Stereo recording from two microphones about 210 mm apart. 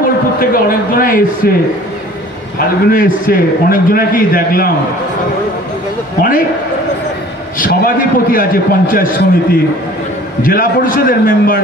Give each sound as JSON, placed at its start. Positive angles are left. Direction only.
{"t": 0.4, "sound": "a man's voice", "side_deg": 45}
{"t": 2.6, "sound": "a man's voice", "side_deg": 40}
{"t": 7.5, "sound": "a man's voice", "side_deg": 40}